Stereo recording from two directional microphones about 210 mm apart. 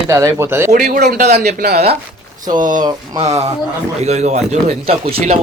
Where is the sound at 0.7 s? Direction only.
45° right (ahead or behind).